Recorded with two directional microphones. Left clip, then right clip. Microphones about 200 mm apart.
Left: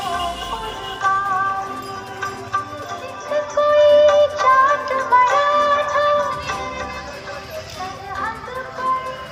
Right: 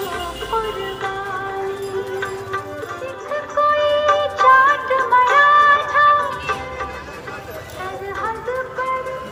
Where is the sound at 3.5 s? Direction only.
25° right (ahead or behind).